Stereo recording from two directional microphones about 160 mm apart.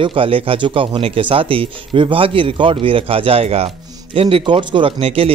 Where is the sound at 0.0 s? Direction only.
35° right (ahead or behind).